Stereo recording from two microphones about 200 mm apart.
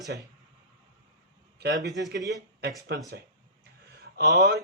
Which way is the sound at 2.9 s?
55° right (ahead or behind).